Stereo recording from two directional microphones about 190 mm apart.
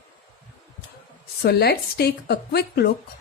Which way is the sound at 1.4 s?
55° left (ahead or behind).